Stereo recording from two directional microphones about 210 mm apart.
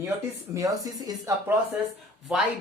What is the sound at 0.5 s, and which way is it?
Speech, 15° right (ahead or behind).